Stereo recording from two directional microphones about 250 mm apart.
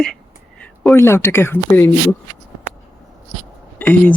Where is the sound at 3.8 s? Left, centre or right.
Centre.